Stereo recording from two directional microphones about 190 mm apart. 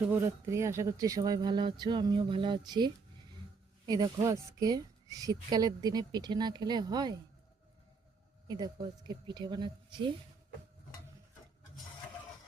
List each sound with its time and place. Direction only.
0.1 s speech: 15° right (ahead or behind)
8.4 s speech: 20° right (ahead or behind)